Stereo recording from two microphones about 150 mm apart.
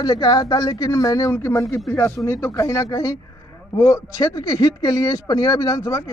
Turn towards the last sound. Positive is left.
turn(degrees=20)  # may be behind; listen again after turning